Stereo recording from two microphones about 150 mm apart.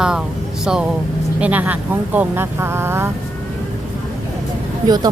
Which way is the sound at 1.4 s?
10° right (ahead or behind).